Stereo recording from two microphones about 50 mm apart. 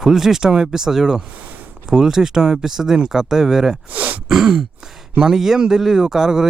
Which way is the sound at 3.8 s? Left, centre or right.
Right.